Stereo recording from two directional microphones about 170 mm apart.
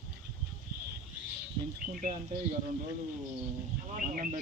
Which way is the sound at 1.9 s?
55° right (ahead or behind).